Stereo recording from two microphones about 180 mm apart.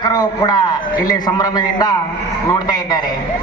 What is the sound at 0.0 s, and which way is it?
A man's voice, 20° left (ahead or behind).